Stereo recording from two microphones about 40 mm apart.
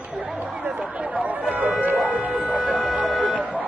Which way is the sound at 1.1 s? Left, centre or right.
Right.